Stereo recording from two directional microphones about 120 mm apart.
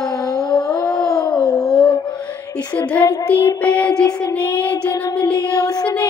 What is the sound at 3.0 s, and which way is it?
Child singing, 15° left (ahead or behind).